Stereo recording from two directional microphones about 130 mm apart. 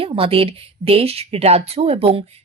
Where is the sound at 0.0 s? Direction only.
45° right (ahead or behind).